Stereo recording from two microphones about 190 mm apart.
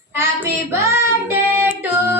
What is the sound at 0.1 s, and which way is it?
Child singing, 15° right (ahead or behind).